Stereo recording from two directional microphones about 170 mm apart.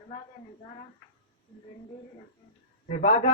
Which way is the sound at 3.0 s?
45° left (ahead or behind).